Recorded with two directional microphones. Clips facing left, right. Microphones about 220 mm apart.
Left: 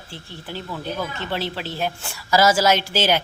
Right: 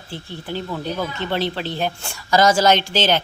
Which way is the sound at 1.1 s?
5° left (ahead or behind).